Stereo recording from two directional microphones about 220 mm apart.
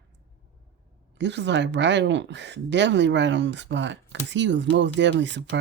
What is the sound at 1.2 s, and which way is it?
Speech, 50° right (ahead or behind).